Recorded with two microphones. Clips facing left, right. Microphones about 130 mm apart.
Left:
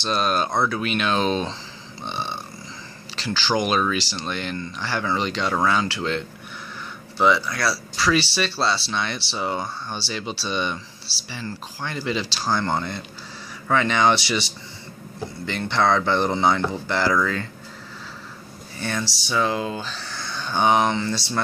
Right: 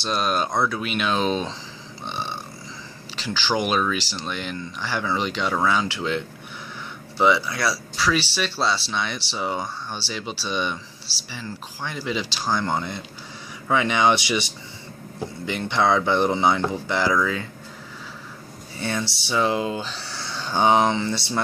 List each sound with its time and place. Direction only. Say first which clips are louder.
0.0 s speech: left 1 dB; 5° right (ahead or behind)
2.0 s burping: left 1 dB; 5° right (ahead or behind)
3.2 s speech: left 1 dB; 5° right (ahead or behind)
7.3 s speech: even; 15° right (ahead or behind)
7.7 s speech: left 2 dB; centre (ahead or behind)
15.4 s speech: even; 15° right (ahead or behind)
19.2 s speech: right 1 dB; 25° right (ahead or behind)